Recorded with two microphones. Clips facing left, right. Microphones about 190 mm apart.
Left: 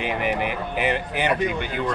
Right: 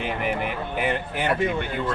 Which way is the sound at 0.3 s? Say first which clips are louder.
Left 2 dB; 80° left.